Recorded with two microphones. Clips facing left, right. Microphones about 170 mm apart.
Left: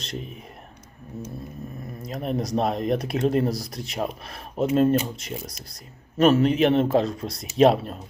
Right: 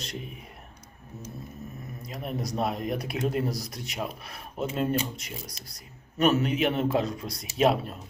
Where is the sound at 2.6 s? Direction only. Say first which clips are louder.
Left 5 dB; 25° left (ahead or behind).